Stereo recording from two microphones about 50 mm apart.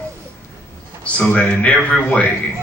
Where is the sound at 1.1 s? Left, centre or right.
Left.